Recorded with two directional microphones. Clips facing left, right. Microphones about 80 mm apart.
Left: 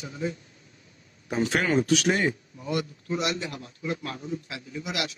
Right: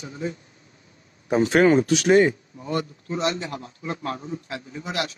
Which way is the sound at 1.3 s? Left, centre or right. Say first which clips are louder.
Right 8 dB; right.